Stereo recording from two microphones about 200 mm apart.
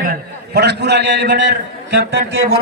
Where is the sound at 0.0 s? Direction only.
45° right (ahead or behind).